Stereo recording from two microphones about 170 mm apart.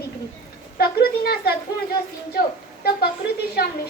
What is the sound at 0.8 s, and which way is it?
Speech, 65° left (ahead or behind).